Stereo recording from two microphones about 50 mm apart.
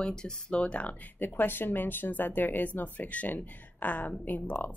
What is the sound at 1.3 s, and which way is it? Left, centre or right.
Speech, left.